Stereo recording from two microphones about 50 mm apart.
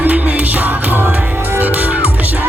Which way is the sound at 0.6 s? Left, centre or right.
Right.